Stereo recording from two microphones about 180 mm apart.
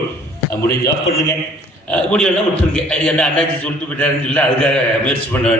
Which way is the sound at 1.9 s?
5° left (ahead or behind).